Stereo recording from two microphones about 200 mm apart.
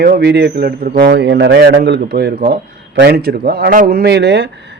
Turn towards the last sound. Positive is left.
turn(degrees=-55)  # may be behind; listen again after turning